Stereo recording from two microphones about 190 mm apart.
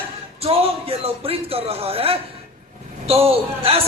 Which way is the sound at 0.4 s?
30° right (ahead or behind).